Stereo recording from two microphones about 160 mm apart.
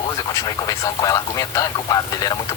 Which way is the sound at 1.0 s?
20° left (ahead or behind).